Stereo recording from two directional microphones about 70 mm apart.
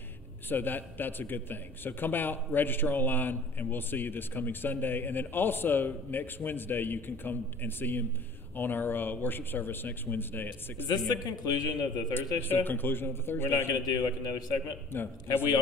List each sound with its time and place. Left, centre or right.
0.5 s a man's voice: left
10.9 s a man's voice: left
12.1 s a man's voice: left
13.8 s a man's voice: left
14.9 s a man's voice: left